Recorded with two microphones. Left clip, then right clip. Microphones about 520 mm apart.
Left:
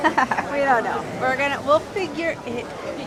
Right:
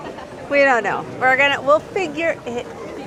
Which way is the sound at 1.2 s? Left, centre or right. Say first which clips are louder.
Right 7 dB; centre.